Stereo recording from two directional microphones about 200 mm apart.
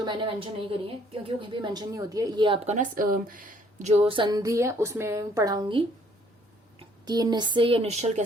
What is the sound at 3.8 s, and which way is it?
A woman's voice, 30° right (ahead or behind).